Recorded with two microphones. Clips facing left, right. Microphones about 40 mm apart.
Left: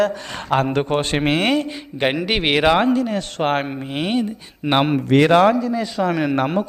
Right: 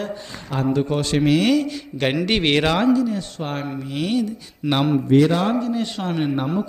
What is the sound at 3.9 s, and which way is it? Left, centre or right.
Speech, left.